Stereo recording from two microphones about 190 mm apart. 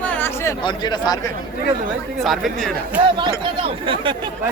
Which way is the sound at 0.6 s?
20° left (ahead or behind).